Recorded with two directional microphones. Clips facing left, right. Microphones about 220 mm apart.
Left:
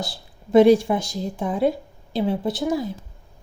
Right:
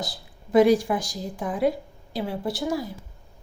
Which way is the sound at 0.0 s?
25° left (ahead or behind).